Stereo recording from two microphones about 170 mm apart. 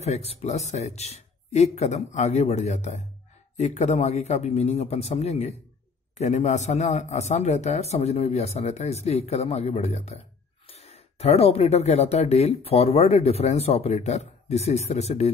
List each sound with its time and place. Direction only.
0.0 s speech: 40° left (ahead or behind)